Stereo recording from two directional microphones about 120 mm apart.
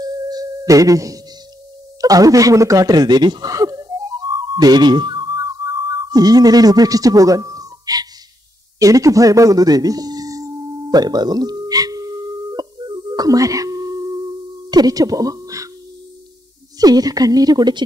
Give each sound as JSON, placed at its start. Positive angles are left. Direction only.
{"t": 0.0, "sound": "singing bowl", "side_deg": -30}
{"t": 2.0, "sound": "a sound", "side_deg": -30}
{"t": 8.7, "sound": "tuning fork", "side_deg": -30}
{"t": 16.7, "sound": "a woman's voice", "side_deg": -30}